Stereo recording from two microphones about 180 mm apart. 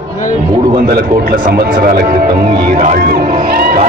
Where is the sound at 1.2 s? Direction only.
50° right (ahead or behind).